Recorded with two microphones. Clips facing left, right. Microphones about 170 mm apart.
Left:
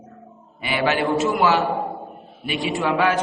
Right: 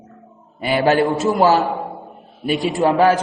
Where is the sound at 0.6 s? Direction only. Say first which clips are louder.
Right 6 dB; 40° right (ahead or behind).